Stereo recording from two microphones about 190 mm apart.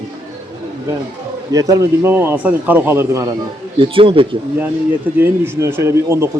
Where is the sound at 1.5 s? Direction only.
15° right (ahead or behind).